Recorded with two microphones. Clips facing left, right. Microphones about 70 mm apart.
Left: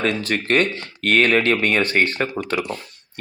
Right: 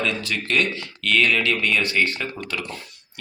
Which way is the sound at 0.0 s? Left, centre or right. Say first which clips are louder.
Left 4 dB; left.